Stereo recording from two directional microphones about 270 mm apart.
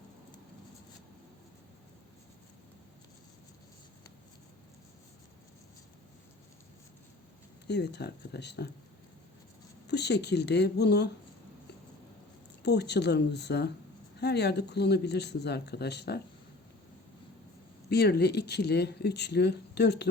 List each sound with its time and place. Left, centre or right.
7.7 s speech: left
9.8 s speech: left
12.6 s speech: left
17.8 s speech: left